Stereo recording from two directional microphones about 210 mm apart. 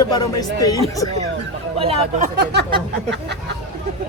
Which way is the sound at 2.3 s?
55° right (ahead or behind).